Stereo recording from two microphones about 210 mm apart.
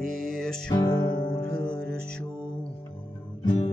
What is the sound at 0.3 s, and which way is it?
Music, 5° left (ahead or behind).